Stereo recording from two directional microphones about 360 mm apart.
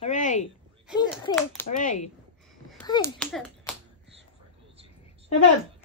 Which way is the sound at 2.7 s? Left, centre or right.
Centre.